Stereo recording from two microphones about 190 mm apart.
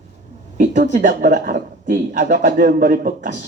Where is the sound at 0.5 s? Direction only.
40° right (ahead or behind).